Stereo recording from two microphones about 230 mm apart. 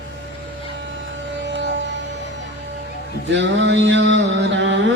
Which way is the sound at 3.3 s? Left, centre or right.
Right.